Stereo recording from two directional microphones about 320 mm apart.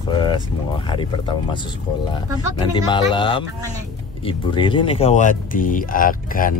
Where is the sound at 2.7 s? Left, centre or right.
Centre.